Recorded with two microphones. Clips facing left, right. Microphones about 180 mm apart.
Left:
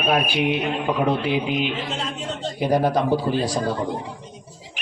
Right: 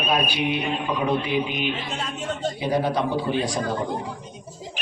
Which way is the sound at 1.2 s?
90° left.